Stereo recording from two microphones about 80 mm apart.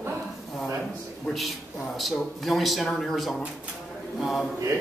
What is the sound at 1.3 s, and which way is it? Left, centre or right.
A man's voice, centre.